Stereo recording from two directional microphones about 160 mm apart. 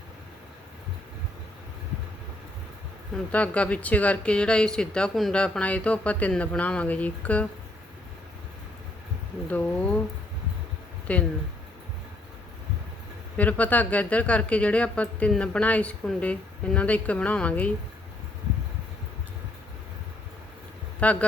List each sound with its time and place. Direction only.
3.3 s a woman's voice: 10° left (ahead or behind)
9.5 s a sound: 10° left (ahead or behind)
11.1 s a woman's voice: 10° left (ahead or behind)
13.3 s a woman's voice: 10° left (ahead or behind)
21.0 s a woman's voice: 10° left (ahead or behind)